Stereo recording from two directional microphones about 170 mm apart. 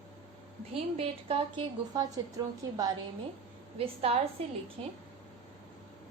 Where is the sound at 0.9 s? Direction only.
35° right (ahead or behind).